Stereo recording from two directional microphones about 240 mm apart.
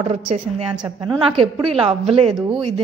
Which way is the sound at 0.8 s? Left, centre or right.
Centre.